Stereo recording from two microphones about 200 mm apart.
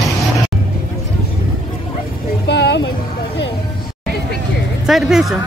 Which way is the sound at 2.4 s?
55° left (ahead or behind).